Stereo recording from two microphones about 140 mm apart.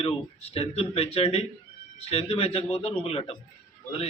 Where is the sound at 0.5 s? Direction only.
45° left (ahead or behind).